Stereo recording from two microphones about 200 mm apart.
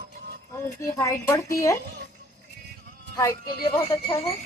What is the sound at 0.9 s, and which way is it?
Speech, 15° left (ahead or behind).